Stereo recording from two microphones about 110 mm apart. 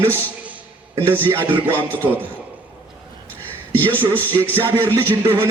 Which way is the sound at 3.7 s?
15° left (ahead or behind).